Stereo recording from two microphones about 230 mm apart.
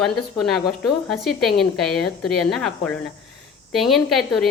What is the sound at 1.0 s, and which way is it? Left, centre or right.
A woman's voice, centre.